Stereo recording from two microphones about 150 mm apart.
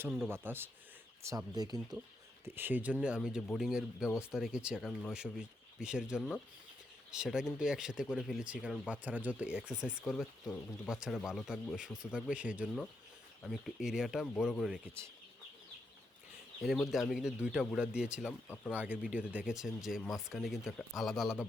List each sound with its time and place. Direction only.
0.3 s speech: 15° right (ahead or behind)
1.5 s speech: 25° right (ahead or behind)
2.4 s speech: 15° right (ahead or behind)
16.9 s speech: centre (ahead or behind)
18.3 s speech: 10° left (ahead or behind)
18.7 s speech: 10° right (ahead or behind)